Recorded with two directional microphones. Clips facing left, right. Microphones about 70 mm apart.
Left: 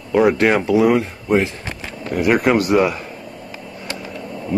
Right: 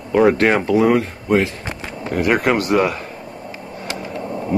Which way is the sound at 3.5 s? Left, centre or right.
Right.